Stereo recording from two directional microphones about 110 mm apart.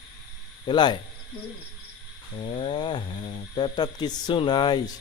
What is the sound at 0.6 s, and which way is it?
Speech, 40° left (ahead or behind).